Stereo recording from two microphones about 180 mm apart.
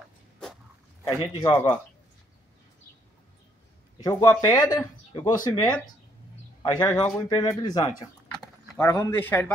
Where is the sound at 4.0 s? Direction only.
20° left (ahead or behind).